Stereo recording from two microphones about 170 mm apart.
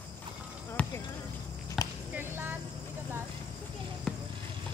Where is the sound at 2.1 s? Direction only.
15° right (ahead or behind).